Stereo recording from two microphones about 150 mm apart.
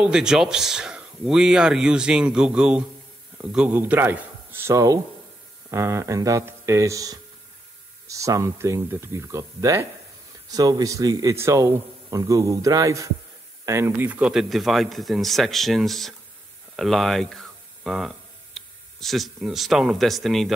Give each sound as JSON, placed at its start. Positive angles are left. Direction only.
{"t": 0.0, "sound": "a man's voice", "side_deg": -5}